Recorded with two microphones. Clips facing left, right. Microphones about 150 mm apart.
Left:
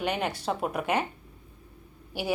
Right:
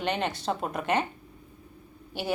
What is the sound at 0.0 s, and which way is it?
Speech, 10° left (ahead or behind).